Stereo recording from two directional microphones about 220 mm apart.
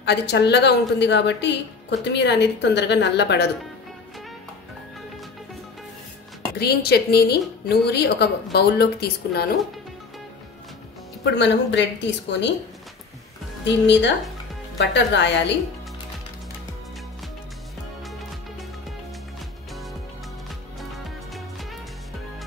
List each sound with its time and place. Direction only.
0.0 s a woman's voice: 50° left (ahead or behind)
6.6 s a woman's voice: 45° left (ahead or behind)
11.2 s a woman's voice: 50° left (ahead or behind)
13.7 s a woman's voice: 55° left (ahead or behind)
20.9 s music: centre (ahead or behind)